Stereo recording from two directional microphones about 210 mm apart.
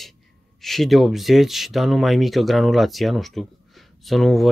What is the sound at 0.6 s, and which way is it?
Speech, centre (ahead or behind).